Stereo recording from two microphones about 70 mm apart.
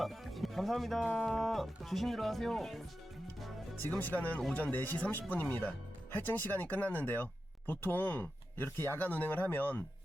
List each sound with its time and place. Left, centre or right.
0.0 s music: centre
1.0 s speech: centre
3.8 s speech: left
9.0 s speech: left